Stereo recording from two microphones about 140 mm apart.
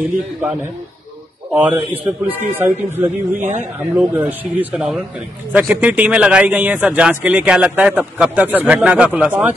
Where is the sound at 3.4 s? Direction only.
60° right (ahead or behind).